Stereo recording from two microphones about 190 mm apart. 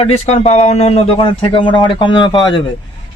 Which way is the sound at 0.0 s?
30° left (ahead or behind).